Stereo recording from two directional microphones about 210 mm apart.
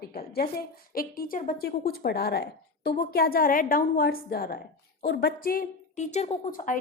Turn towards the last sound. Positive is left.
turn(degrees=40)  # may be behind; listen again after turning